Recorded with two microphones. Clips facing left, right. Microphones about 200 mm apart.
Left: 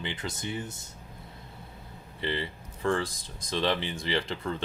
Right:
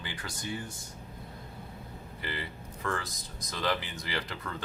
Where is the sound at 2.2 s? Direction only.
25° left (ahead or behind).